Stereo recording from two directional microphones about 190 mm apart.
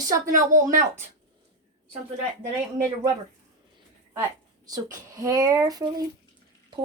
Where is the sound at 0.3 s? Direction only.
45° right (ahead or behind).